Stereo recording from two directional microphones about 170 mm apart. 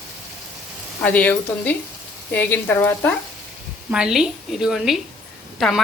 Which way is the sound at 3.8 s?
5° right (ahead or behind).